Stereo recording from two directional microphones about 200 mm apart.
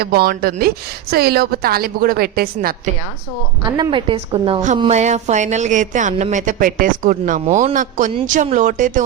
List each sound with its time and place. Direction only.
0.0 s a woman's voice: 50° right (ahead or behind)
3.7 s a woman's voice: 20° right (ahead or behind)
4.8 s speech: 35° right (ahead or behind)